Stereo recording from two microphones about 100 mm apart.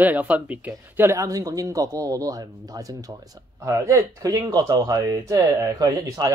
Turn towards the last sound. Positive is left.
turn(degrees=-35)  # may be behind; listen again after turning